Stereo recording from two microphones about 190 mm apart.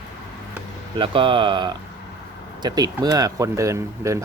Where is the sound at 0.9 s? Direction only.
25° right (ahead or behind).